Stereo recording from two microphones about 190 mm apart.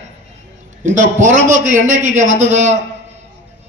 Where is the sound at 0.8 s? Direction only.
40° right (ahead or behind).